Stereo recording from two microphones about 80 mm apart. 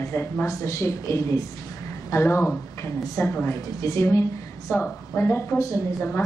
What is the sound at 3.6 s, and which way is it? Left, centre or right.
A woman's voice, left.